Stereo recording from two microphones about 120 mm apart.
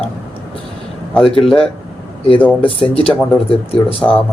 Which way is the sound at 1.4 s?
5° left (ahead or behind).